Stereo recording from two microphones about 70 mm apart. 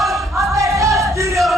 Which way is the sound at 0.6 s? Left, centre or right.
Right.